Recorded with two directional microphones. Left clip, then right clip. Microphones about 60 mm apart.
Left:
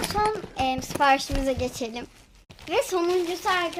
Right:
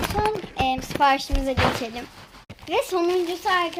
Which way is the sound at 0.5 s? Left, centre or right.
Left.